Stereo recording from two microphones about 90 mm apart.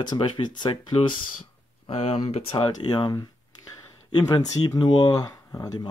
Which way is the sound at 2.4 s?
90° left.